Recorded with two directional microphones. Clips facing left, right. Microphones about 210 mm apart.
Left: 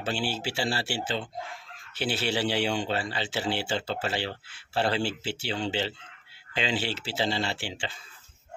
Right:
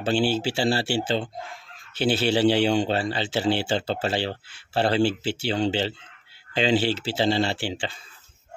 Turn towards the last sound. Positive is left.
turn(degrees=-35)  # may be behind; listen again after turning